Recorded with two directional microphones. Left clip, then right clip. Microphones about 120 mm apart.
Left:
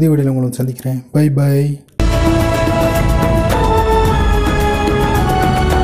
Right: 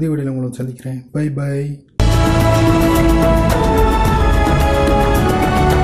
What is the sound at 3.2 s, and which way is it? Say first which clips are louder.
Music: even; centre (ahead or behind).